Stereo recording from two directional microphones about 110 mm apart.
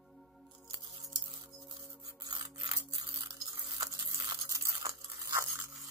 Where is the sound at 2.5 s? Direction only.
35° right (ahead or behind).